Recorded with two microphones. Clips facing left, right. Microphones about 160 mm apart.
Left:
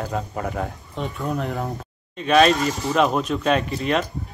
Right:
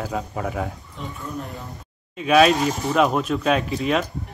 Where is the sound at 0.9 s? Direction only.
75° left (ahead or behind).